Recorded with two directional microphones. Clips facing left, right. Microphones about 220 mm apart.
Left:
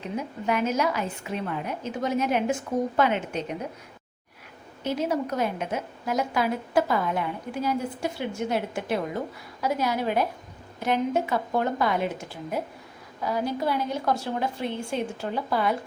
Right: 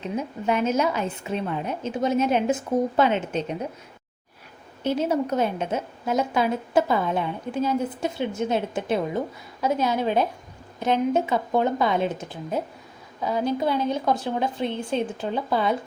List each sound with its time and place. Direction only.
0.2 s a woman's voice: 25° right (ahead or behind)
4.8 s a woman's voice: 30° right (ahead or behind)